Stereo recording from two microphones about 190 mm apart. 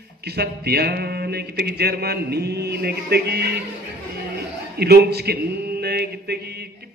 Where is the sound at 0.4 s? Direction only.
55° right (ahead or behind).